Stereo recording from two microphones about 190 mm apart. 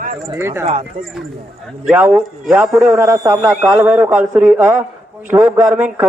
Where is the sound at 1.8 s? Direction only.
10° right (ahead or behind).